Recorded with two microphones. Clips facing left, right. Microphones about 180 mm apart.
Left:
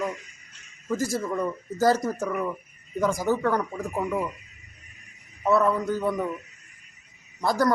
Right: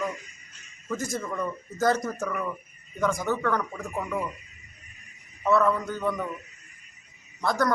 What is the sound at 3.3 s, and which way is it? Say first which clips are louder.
Speech: left 3 dB; 35° left (ahead or behind).